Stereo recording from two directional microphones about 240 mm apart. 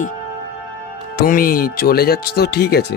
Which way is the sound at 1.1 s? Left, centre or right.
Left.